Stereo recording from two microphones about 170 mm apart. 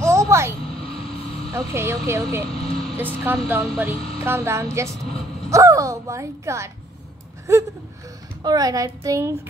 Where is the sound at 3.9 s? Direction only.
35° left (ahead or behind).